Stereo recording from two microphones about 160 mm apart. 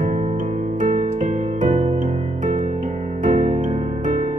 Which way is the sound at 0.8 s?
50° right (ahead or behind).